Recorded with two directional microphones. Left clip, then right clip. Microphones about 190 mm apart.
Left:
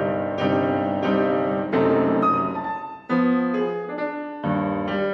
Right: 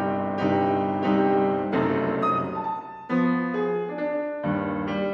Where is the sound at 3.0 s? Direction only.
15° left (ahead or behind).